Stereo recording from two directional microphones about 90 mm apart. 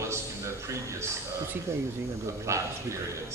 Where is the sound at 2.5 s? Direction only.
35° right (ahead or behind).